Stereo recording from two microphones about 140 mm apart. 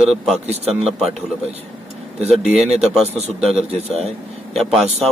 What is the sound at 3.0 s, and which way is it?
A man's voice, 50° right (ahead or behind).